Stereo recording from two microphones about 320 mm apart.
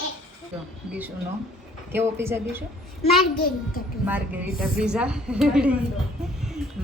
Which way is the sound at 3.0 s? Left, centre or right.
Left.